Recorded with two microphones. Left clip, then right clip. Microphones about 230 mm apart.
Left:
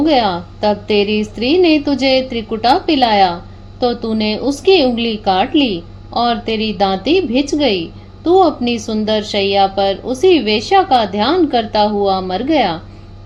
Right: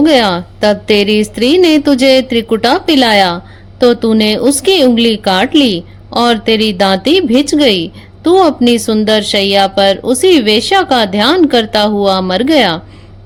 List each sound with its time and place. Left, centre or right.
0.0 s a woman's voice: right